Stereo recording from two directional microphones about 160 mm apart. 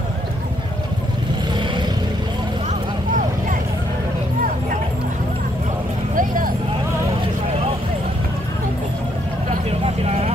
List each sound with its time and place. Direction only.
6.1 s vehicle: 60° right (ahead or behind)